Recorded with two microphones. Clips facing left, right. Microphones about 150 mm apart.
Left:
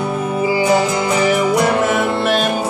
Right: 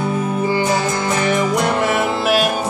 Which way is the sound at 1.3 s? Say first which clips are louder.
Left 1 dB; 5° left (ahead or behind).